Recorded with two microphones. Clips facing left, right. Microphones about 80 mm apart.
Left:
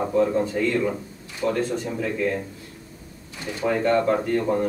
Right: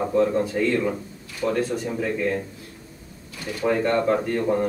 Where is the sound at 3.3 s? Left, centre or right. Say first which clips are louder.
Even; left.